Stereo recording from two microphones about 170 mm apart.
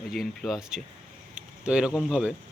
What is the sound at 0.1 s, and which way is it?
Speech, centre (ahead or behind).